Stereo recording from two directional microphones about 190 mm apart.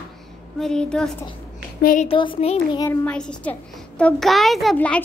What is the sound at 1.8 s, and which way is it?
Speech, 45° left (ahead or behind).